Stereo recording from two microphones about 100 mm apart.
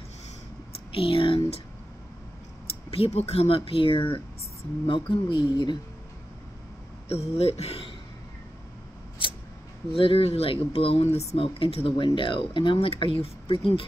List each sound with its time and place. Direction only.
0.9 s speech: 65° left (ahead or behind)
2.9 s speech: 85° left; by 5.4 s 55° left (ahead or behind)
7.1 s speech: 90° left
9.9 s speech: 65° left (ahead or behind)